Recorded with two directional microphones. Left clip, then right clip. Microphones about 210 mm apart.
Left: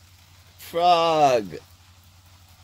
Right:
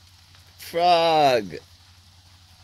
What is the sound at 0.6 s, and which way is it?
Speech, 25° right (ahead or behind).